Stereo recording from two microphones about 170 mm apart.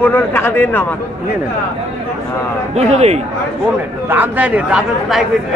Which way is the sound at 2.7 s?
40° right (ahead or behind).